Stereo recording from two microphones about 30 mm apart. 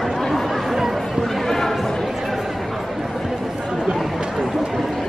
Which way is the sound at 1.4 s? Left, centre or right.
Centre.